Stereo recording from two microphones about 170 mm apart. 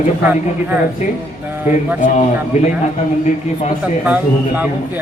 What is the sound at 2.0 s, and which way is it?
Speech, 45° left (ahead or behind).